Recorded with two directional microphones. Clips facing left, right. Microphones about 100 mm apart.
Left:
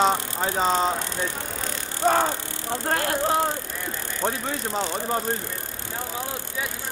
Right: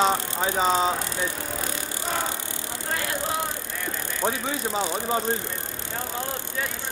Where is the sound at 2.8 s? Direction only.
50° left (ahead or behind).